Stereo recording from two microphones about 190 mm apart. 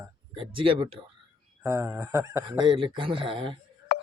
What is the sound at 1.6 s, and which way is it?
Speech, 15° right (ahead or behind).